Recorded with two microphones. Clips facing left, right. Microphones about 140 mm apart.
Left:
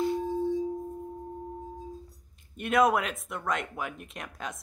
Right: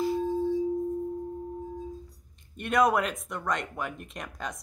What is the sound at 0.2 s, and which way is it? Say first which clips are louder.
Singing bowl: right 2 dB; 15° left (ahead or behind).